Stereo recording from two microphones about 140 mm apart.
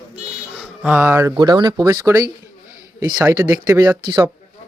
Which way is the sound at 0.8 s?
10° right (ahead or behind).